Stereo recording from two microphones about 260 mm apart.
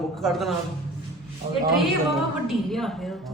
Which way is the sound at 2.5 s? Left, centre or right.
Centre.